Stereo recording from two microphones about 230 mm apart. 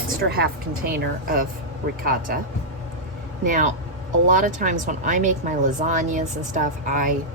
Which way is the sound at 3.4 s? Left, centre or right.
Right.